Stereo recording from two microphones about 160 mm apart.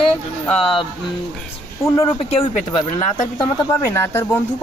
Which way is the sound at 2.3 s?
35° left (ahead or behind).